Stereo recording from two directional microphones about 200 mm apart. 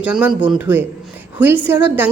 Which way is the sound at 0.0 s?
5° right (ahead or behind).